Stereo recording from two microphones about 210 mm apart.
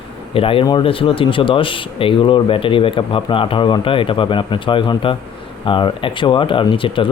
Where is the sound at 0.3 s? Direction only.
25° left (ahead or behind).